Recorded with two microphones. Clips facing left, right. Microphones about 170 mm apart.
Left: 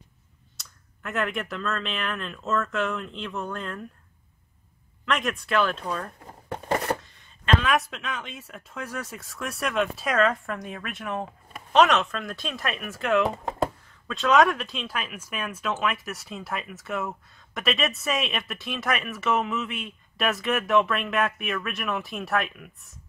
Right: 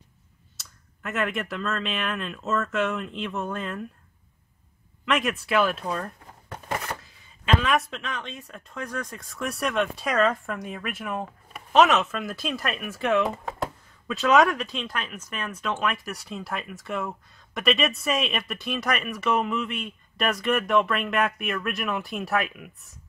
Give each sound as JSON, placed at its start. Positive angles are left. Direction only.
{"t": 0.6, "sound": "speech", "side_deg": 0}
{"t": 5.0, "sound": "speech", "side_deg": -5}
{"t": 6.7, "sound": "a sound", "side_deg": 35}
{"t": 7.0, "sound": "speech", "side_deg": -5}